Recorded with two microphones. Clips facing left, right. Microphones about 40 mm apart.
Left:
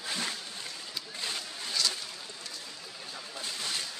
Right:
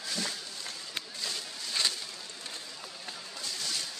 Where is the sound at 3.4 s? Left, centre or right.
Left.